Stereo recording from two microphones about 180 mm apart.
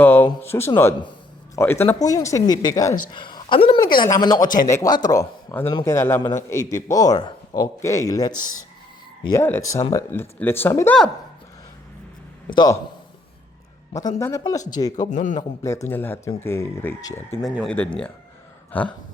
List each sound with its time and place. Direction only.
0.0 s a sound: 10° left (ahead or behind)
0.3 s a man's voice: 15° left (ahead or behind)
12.5 s speech: 25° left (ahead or behind)
14.2 s a man's voice: 15° left (ahead or behind)
15.1 s a man's voice: 45° left (ahead or behind)
15.4 s a man's voice: 15° left (ahead or behind)
17.4 s a man's voice: centre (ahead or behind)